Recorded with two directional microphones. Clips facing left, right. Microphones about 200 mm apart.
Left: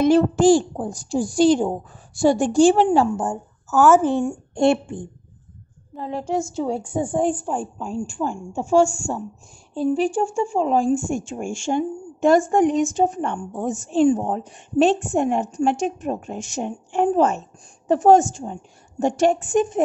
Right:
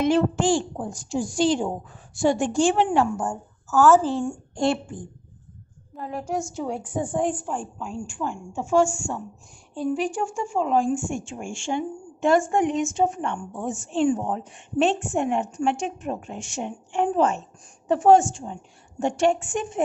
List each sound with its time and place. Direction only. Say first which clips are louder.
0.0 s speech: left 6 dB; 40° left (ahead or behind)
3.2 s a woman's voice: left 3 dB; 20° left (ahead or behind); by 19.8 s 40° left (ahead or behind)